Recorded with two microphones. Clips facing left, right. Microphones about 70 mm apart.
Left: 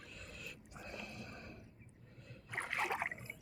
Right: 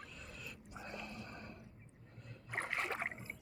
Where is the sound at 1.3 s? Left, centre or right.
Right.